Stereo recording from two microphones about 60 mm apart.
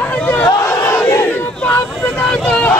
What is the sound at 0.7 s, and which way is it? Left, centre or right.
Battle cry, left.